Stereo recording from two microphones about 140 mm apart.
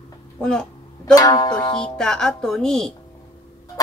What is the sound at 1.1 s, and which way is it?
Music, 25° left (ahead or behind).